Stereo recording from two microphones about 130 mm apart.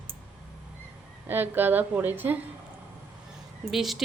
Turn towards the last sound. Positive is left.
turn(degrees=0)  # may be behind; listen again after turning